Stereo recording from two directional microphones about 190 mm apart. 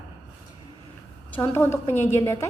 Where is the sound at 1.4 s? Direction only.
15° left (ahead or behind).